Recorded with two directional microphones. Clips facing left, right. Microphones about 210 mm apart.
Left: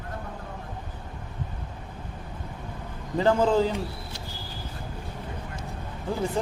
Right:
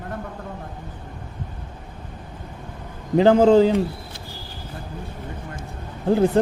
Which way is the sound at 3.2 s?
65° right (ahead or behind).